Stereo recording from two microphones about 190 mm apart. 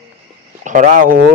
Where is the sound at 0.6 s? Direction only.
40° right (ahead or behind).